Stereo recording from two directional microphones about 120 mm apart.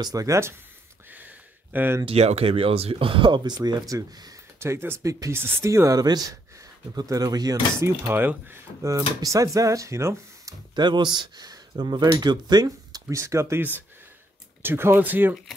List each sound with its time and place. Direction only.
0.0 s speech: 30° right (ahead or behind)
1.1 s a sound: 15° right (ahead or behind)
2.0 s speech: 60° right (ahead or behind); by 7.5 s 35° right (ahead or behind)
7.8 s speech: 20° right (ahead or behind)
10.8 s speech: 40° right (ahead or behind); by 15.3 s 15° right (ahead or behind)